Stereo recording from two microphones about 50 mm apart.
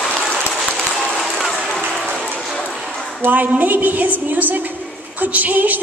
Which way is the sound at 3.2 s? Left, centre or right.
Right.